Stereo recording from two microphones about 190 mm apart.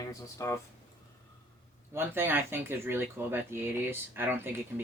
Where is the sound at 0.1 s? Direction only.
15° left (ahead or behind).